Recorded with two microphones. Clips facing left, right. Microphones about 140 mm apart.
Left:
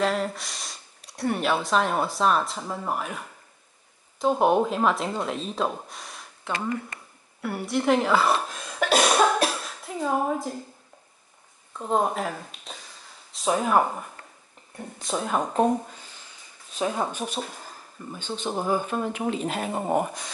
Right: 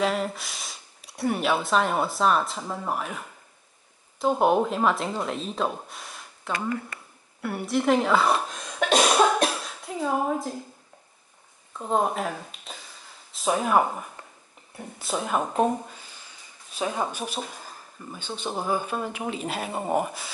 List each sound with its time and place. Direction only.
0.0 s speech: centre (ahead or behind)
7.4 s cough: centre (ahead or behind)
11.8 s speech: centre (ahead or behind)
17.1 s speech: 5° right (ahead or behind)
19.7 s speech: 5° left (ahead or behind)